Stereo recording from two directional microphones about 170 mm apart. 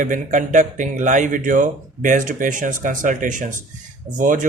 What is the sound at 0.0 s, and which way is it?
Speech, 50° right (ahead or behind).